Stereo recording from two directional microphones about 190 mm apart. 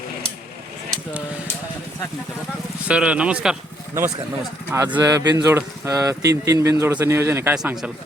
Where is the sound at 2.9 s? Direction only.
5° right (ahead or behind).